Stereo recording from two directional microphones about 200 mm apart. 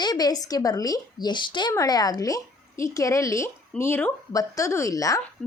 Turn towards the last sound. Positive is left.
turn(degrees=15)  # may be behind; listen again after turning